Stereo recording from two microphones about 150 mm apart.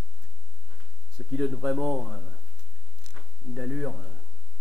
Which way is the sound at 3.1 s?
Centre (ahead or behind).